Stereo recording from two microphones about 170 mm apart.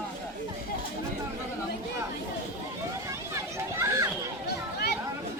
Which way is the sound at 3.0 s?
15° right (ahead or behind).